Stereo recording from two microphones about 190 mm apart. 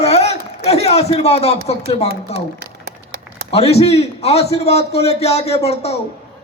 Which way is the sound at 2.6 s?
60° right (ahead or behind).